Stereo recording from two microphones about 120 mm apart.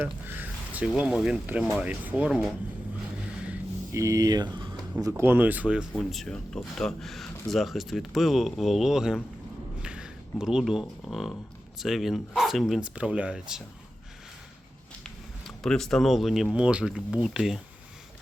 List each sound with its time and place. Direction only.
0.0 s speech: 15° right (ahead or behind)
3.9 s speech: 25° right (ahead or behind)
5.0 s speech: 20° right (ahead or behind)
5.9 s speech: centre (ahead or behind)
15.0 s speech: 5° left (ahead or behind)